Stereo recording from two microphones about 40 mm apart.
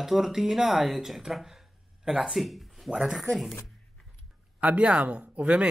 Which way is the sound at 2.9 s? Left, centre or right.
Centre.